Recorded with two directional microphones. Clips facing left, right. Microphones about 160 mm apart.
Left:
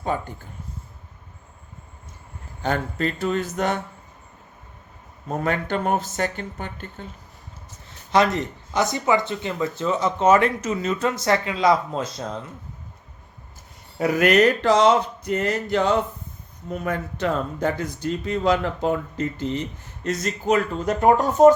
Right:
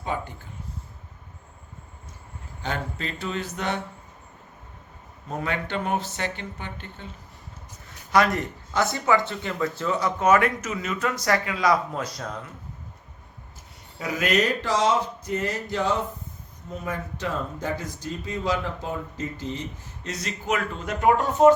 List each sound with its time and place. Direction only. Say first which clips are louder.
0.1 s speech: left 3 dB; 45° left (ahead or behind)
2.6 s speech: left 7 dB; 45° left (ahead or behind)
5.4 s speech: left 4 dB; 45° left (ahead or behind)
7.9 s speech: left 2 dB; 25° left (ahead or behind)
14.0 s speech: left 7 dB; 60° left (ahead or behind)
20.1 s speech: left 6 dB; 50° left (ahead or behind)